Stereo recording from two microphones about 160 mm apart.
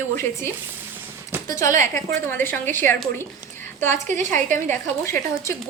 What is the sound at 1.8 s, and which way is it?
Speech, 55° right (ahead or behind).